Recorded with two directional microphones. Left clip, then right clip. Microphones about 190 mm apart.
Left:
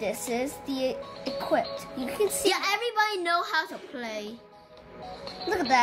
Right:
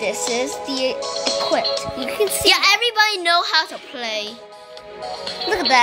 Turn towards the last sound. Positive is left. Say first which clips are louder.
# right 7 dB
turn(degrees=-5)  # may be behind; listen again after turning